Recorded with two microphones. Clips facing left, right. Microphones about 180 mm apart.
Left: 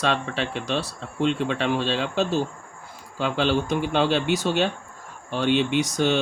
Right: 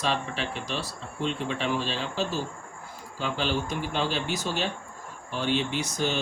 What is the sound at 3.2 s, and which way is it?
Speech, 70° left (ahead or behind).